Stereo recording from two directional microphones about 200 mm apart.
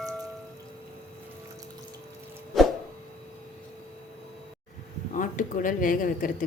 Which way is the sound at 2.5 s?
Centre (ahead or behind).